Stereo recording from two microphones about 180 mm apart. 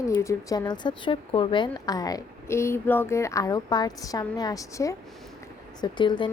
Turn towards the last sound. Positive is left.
turn(degrees=25)  # may be behind; listen again after turning